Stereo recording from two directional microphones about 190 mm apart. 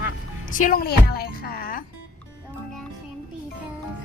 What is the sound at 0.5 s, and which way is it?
A woman's voice, 45° left (ahead or behind).